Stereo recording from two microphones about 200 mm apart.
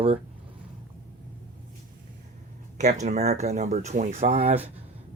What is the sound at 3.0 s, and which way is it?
Speech, 35° right (ahead or behind).